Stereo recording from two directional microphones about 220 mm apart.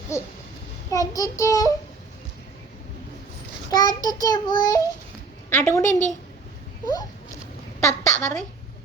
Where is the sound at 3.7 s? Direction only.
15° left (ahead or behind).